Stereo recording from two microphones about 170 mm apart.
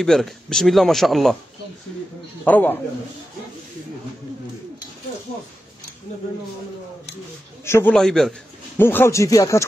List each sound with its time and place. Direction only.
0.0 s speech: centre (ahead or behind)
2.4 s a man's voice: 10° left (ahead or behind)
7.6 s a man's voice: 15° left (ahead or behind)
7.9 s a man's voice: centre (ahead or behind); by 9.7 s 20° left (ahead or behind)